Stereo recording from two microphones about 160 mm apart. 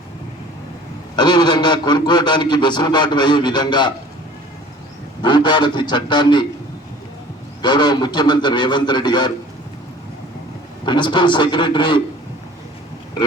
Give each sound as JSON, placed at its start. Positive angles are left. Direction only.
{"t": 1.1, "sound": "a man's voice", "side_deg": 25}
{"t": 5.2, "sound": "a man's voice", "side_deg": 30}
{"t": 7.6, "sound": "a man's voice", "side_deg": 25}
{"t": 10.8, "sound": "a man's voice", "side_deg": 30}